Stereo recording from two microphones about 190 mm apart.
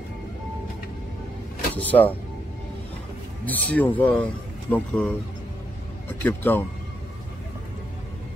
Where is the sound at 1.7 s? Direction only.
10° left (ahead or behind).